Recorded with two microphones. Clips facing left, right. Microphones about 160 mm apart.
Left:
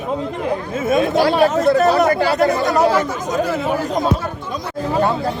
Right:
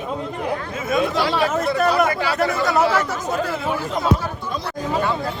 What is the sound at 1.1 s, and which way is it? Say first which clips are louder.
Speech: left 6 dB; 50° left (ahead or behind).